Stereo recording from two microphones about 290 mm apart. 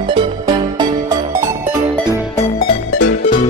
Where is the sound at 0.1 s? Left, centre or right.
Centre.